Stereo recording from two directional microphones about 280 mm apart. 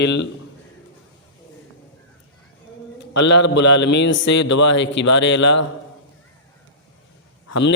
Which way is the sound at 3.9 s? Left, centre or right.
Left.